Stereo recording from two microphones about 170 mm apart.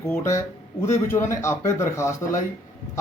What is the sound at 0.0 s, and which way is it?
A man's voice, 15° left (ahead or behind).